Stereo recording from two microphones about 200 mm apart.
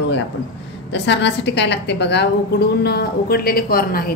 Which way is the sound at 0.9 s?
60° left (ahead or behind).